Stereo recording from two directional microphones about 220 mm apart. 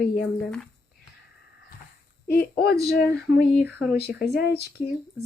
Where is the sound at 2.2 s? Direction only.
45° left (ahead or behind).